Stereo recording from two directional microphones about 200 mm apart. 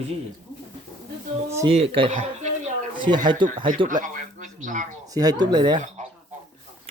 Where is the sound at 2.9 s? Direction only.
25° right (ahead or behind).